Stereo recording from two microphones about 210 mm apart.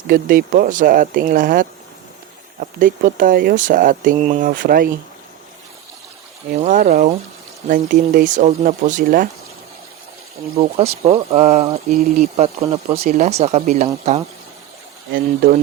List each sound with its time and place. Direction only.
0.1 s speech: 45° right (ahead or behind)
6.6 s speech: 40° right (ahead or behind)
10.6 s speech: 30° right (ahead or behind)
12.7 s speech: 30° right (ahead or behind)
15.1 s speech: 45° right (ahead or behind)